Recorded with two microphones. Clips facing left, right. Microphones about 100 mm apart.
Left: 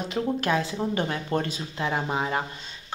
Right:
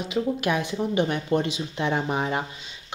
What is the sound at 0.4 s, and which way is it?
Speech, 15° right (ahead or behind).